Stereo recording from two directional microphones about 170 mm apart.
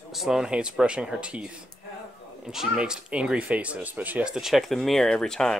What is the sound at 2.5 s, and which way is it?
Speech, 5° right (ahead or behind).